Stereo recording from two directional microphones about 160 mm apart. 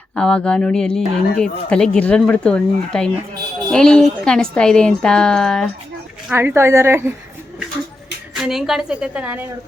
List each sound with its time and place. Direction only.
0.2 s speech: 5° left (ahead or behind)
6.3 s a woman's voice: 15° right (ahead or behind)
8.4 s speech: centre (ahead or behind)